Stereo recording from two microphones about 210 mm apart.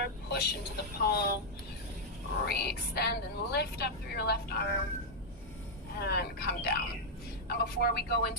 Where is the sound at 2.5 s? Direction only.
50° left (ahead or behind).